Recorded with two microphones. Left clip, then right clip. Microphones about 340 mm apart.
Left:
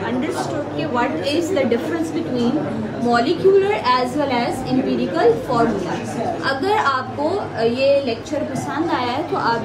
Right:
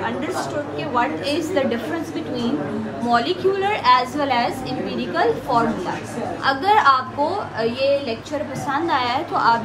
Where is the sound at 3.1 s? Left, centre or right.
Centre.